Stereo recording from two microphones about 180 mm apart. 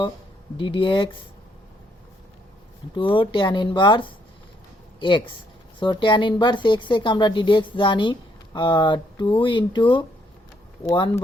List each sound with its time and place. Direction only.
0.5 s speech: 30° left (ahead or behind)
2.9 s speech: 25° left (ahead or behind)